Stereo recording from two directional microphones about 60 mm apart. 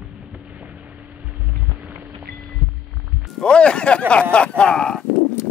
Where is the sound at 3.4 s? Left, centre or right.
Centre.